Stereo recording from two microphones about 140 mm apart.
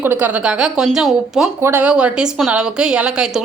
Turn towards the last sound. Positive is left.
turn(degrees=-5)  # may be behind; listen again after turning